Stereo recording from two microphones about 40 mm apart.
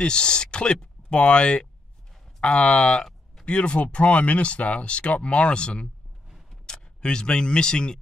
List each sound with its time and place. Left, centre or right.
0.0 s speech: left